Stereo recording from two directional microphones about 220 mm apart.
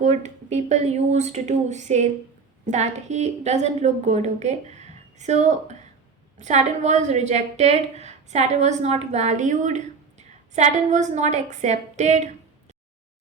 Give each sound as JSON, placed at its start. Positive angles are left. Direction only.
{"t": 0.0, "sound": "a woman's voice", "side_deg": -30}